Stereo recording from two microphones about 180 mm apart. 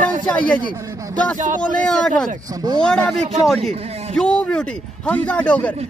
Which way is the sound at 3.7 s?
35° right (ahead or behind).